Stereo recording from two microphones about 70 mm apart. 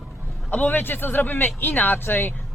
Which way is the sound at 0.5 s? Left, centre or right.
Left.